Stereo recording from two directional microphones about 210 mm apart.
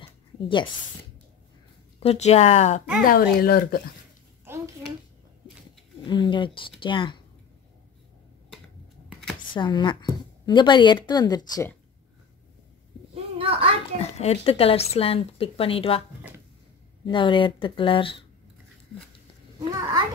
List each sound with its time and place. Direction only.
2.0 s speech: 30° left (ahead or behind)
3.0 s speech: 45° left (ahead or behind)
6.0 s speech: 20° left (ahead or behind)
9.5 s speech: 20° left (ahead or behind)
13.1 s a sound: 25° right (ahead or behind)
14.2 s speech: 30° left (ahead or behind)
17.0 s speech: 25° left (ahead or behind)
19.7 s a sound: 20° right (ahead or behind)